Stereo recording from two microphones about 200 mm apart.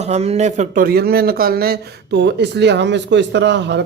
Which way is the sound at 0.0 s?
30° right (ahead or behind).